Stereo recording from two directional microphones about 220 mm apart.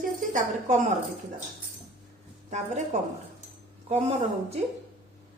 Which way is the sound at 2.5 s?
30° right (ahead or behind).